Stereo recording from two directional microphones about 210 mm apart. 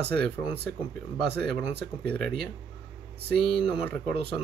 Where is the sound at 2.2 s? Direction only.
Centre (ahead or behind).